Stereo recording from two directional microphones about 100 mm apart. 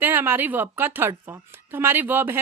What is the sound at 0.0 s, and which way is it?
A woman's voice, 20° right (ahead or behind).